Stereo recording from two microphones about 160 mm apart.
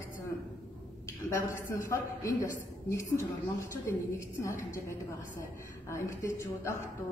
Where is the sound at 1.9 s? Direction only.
20° left (ahead or behind).